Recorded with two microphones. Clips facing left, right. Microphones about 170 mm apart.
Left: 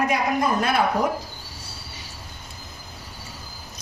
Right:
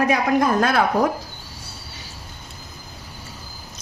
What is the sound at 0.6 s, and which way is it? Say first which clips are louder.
Speech: right 4 dB; 85° right.